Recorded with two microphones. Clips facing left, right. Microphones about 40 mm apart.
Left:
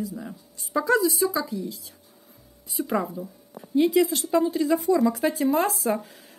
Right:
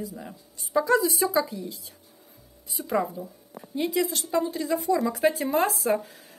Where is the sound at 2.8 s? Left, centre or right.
Centre.